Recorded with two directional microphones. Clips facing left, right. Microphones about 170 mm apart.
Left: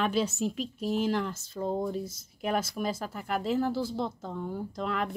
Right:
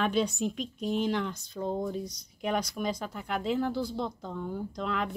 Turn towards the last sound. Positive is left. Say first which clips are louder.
# even
turn(degrees=0)  # may be behind; listen again after turning